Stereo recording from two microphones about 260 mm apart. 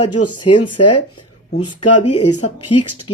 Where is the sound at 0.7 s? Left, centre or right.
Left.